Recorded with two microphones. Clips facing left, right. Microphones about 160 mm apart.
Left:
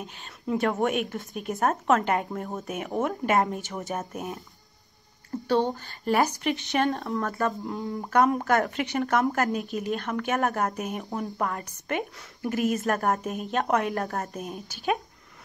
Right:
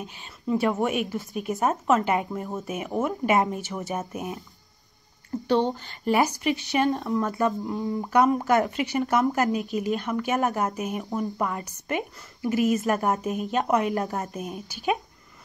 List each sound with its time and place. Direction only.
0.2 s a woman's voice: 5° right (ahead or behind)
6.4 s a woman's voice: centre (ahead or behind)
7.2 s speech: 20° right (ahead or behind)
7.6 s a woman's voice: centre (ahead or behind)
12.5 s speech: 45° left (ahead or behind)
12.8 s a woman's voice: centre (ahead or behind)